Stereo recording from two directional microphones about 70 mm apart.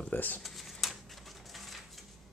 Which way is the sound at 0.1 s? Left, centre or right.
Left.